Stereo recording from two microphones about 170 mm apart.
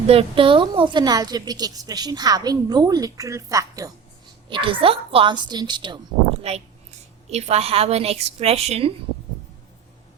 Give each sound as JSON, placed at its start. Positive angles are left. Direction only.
{"t": 0.1, "sound": "a woman's voice", "side_deg": -35}
{"t": 6.5, "sound": "a woman's voice", "side_deg": -40}